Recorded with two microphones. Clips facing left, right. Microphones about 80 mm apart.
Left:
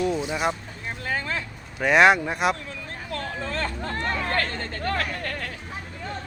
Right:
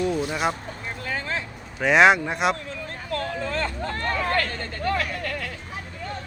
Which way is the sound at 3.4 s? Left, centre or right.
Left.